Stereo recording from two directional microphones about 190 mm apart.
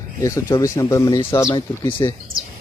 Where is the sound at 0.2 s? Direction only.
15° left (ahead or behind).